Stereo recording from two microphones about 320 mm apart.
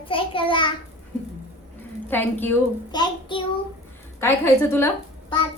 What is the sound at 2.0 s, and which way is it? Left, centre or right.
Child singing, centre.